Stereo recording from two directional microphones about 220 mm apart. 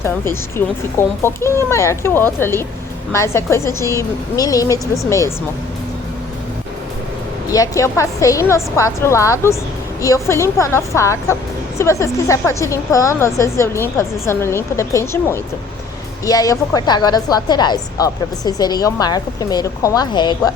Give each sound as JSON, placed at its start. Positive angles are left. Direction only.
{"t": 0.0, "sound": "a woman's voice", "side_deg": 10}
{"t": 7.5, "sound": "a woman's voice", "side_deg": 15}